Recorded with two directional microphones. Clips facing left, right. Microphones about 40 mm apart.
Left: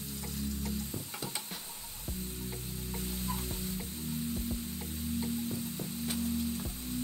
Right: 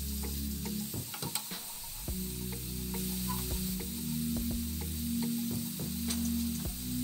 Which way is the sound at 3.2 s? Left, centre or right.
Left.